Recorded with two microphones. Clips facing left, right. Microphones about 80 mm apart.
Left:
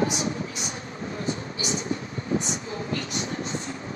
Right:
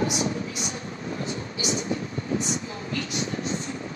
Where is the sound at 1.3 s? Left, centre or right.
Left.